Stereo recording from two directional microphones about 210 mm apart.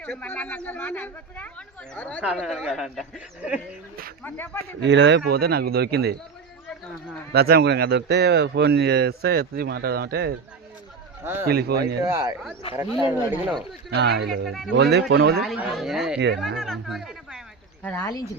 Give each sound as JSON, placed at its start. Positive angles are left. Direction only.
{"t": 0.0, "sound": "speech", "side_deg": 10}
{"t": 4.2, "sound": "speech", "side_deg": 10}
{"t": 4.8, "sound": "speech", "side_deg": -55}
{"t": 7.3, "sound": "speech", "side_deg": -50}
{"t": 11.2, "sound": "speech", "side_deg": -10}
{"t": 11.4, "sound": "speech", "side_deg": -45}
{"t": 12.0, "sound": "speech", "side_deg": -15}
{"t": 12.6, "sound": "speech", "side_deg": 25}
{"t": 13.0, "sound": "speech", "side_deg": -15}
{"t": 13.9, "sound": "speech", "side_deg": -50}
{"t": 15.4, "sound": "speech", "side_deg": -5}